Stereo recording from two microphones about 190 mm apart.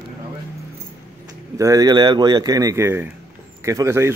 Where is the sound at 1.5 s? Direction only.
20° right (ahead or behind).